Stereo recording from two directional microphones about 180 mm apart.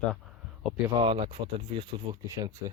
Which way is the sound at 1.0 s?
30° right (ahead or behind).